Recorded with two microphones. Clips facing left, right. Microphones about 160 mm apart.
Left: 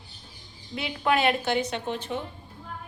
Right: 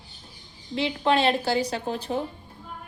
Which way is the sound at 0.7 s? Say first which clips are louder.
Right 3 dB; 25° right (ahead or behind).